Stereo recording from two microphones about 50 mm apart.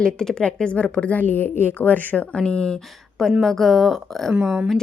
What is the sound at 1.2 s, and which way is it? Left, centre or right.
A woman's voice, left.